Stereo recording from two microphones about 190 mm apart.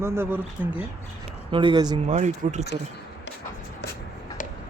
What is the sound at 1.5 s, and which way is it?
Speech, 25° right (ahead or behind).